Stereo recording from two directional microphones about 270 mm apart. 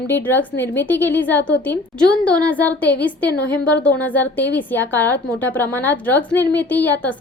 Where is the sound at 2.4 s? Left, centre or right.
Centre.